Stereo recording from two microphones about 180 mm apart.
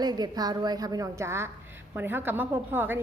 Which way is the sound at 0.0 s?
20° right (ahead or behind).